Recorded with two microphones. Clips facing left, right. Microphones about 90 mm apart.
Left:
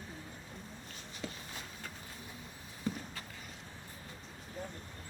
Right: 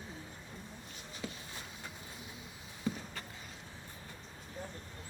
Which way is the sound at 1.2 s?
5° right (ahead or behind).